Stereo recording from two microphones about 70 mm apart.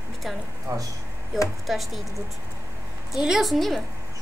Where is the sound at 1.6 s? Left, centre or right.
Centre.